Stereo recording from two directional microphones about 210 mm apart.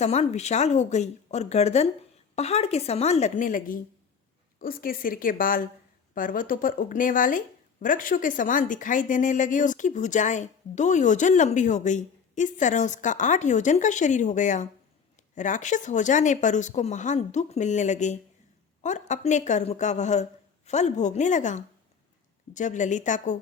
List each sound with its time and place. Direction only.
0.0 s a woman's voice: 30° left (ahead or behind)